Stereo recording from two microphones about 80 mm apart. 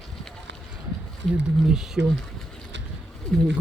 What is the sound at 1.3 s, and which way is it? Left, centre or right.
Speech, centre.